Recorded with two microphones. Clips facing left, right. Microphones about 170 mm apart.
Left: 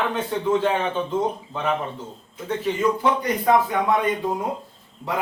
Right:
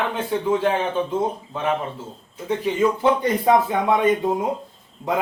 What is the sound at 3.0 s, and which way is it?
Speech, 25° right (ahead or behind).